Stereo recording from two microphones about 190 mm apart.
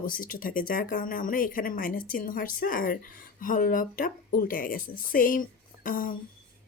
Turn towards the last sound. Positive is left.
turn(degrees=45)  # may be behind; listen again after turning